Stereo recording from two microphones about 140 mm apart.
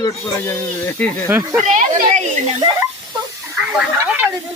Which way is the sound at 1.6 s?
60° right (ahead or behind).